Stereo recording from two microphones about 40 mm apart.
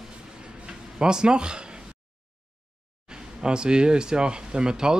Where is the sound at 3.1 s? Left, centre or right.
Right.